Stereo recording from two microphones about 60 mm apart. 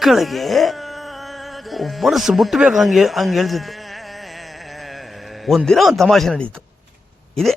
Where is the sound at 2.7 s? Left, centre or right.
Centre.